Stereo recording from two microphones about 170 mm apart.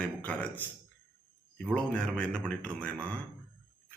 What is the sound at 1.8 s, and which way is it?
Speech, 5° left (ahead or behind).